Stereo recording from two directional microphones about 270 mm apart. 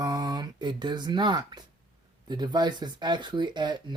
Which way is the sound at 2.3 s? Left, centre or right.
Centre.